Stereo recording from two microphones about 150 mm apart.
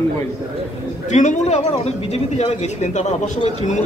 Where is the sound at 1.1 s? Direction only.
55° left (ahead or behind).